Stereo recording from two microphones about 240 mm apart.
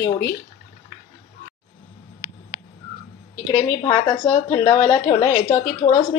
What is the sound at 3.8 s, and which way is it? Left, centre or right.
A woman's voice, centre.